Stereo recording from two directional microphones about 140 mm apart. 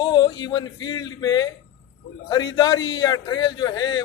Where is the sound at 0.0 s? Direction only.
30° left (ahead or behind).